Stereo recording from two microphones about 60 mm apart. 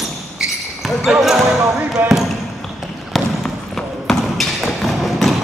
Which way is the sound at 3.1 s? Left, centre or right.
Centre.